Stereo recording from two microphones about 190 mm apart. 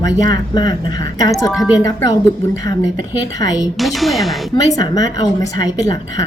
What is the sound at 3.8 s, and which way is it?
Speech, centre (ahead or behind).